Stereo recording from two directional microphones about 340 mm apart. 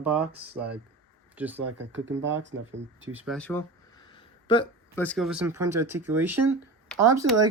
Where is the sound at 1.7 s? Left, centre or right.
Right.